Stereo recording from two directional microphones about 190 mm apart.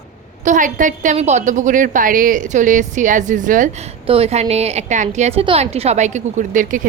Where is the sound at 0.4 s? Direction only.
40° right (ahead or behind).